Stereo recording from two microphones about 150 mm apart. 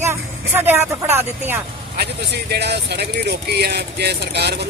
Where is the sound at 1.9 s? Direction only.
90° right.